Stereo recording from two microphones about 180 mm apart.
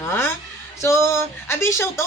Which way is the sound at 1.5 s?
15° left (ahead or behind).